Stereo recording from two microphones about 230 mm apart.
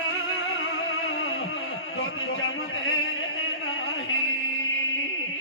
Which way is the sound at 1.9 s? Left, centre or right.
Left.